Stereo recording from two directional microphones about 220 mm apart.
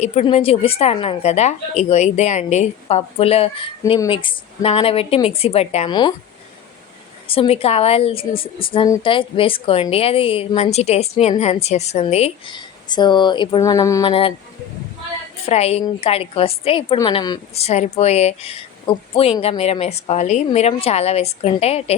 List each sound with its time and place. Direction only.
0.0 s a woman's voice: 30° left (ahead or behind)
7.3 s a woman's voice: 25° left (ahead or behind)
15.4 s a woman's voice: 30° left (ahead or behind)